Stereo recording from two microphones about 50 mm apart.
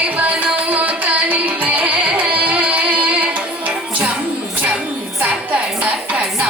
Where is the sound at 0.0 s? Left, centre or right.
Right.